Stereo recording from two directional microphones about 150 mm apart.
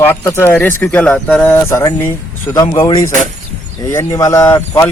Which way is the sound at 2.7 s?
35° left (ahead or behind).